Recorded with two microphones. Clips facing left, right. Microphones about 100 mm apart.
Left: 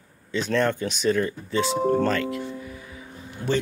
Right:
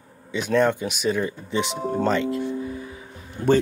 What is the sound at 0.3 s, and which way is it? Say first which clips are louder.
Speech: right 3 dB; 10° right (ahead or behind).